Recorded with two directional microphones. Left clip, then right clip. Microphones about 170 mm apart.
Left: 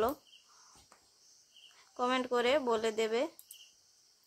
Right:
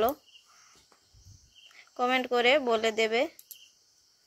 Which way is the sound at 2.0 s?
15° right (ahead or behind).